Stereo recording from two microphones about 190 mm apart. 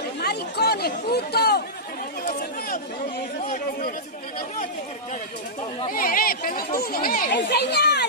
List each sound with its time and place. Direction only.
0.2 s chatter: 60° left (ahead or behind)
5.9 s speech: 50° left (ahead or behind)